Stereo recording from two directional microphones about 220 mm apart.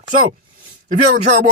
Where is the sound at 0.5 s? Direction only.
40° right (ahead or behind).